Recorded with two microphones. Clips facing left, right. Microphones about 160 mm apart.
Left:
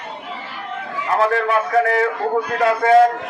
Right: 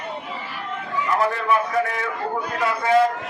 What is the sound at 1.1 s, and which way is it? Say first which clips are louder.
Speech: left 4 dB; 80° left.